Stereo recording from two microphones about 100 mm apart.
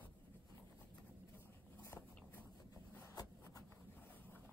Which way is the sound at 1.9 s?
20° left (ahead or behind).